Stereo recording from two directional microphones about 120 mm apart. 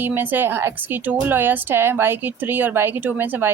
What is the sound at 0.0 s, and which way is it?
A woman's voice, 15° right (ahead or behind).